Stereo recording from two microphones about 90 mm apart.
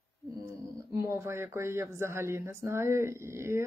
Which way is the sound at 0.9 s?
30° right (ahead or behind).